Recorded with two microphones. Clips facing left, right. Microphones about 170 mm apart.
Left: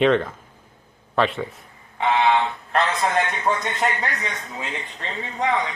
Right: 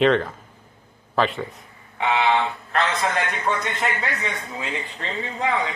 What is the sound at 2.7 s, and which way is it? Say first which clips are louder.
Speech: left 2 dB; 35° left (ahead or behind).